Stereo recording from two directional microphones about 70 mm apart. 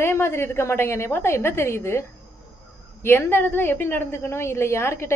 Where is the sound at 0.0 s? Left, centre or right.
Left.